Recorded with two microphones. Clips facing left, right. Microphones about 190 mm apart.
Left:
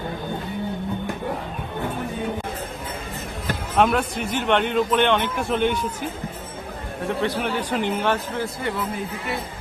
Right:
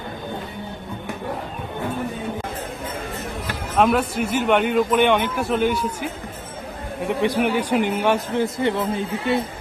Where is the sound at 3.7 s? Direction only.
Centre (ahead or behind).